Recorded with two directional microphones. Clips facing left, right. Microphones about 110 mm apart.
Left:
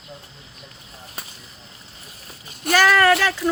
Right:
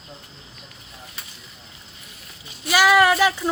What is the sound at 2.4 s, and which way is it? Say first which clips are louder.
Speech: left 4 dB; 50° left (ahead or behind).